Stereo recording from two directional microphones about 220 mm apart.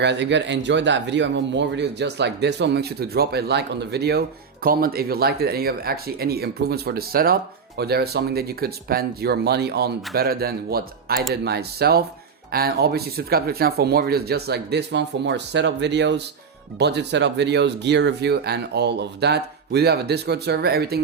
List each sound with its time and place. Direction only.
0.0 s speech: 50° right (ahead or behind)